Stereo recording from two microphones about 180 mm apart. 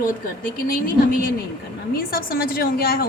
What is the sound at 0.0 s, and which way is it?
A woman's voice, 50° left (ahead or behind).